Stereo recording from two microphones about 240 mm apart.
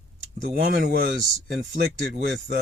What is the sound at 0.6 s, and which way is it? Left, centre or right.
Speech, right.